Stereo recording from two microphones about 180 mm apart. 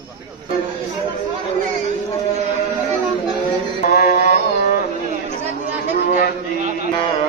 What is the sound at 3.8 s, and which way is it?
Mantra, 55° left (ahead or behind).